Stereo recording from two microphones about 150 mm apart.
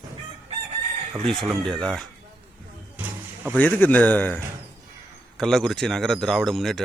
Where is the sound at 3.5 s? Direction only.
10° left (ahead or behind).